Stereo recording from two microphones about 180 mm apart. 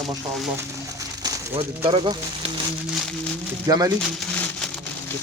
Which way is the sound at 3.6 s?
20° right (ahead or behind).